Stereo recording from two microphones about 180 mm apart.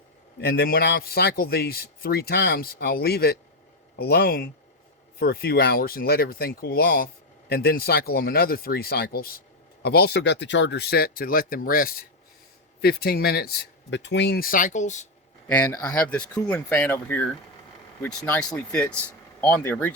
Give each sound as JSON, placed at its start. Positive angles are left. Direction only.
{"t": 0.3, "sound": "a man's voice", "side_deg": 60}
{"t": 13.9, "sound": "speech", "side_deg": 80}
{"t": 15.4, "sound": "speech", "side_deg": 10}